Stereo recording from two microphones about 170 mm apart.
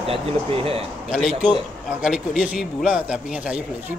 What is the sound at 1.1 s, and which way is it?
A man's voice, 5° right (ahead or behind).